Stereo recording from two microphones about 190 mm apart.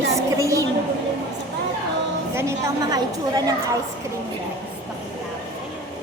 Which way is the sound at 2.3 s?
15° right (ahead or behind).